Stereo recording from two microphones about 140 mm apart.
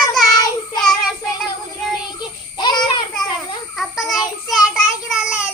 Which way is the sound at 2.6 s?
30° left (ahead or behind).